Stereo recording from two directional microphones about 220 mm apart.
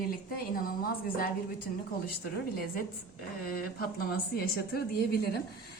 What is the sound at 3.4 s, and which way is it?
A woman's voice, 45° left (ahead or behind).